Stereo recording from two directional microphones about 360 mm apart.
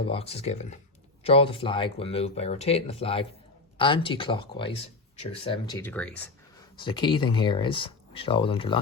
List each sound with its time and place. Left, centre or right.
0.0 s speech: centre